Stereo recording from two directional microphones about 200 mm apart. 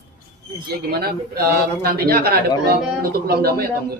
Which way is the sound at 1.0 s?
50° right (ahead or behind).